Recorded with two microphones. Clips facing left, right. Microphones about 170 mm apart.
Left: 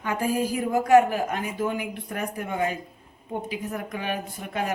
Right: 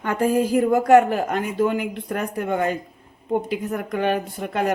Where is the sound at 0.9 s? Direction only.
65° right (ahead or behind).